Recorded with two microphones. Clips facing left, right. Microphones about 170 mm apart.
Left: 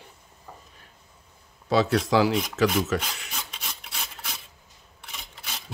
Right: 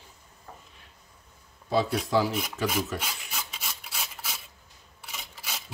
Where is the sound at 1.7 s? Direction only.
90° left.